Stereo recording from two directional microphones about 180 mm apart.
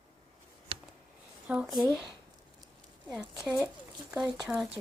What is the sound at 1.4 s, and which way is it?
Speech, 5° right (ahead or behind).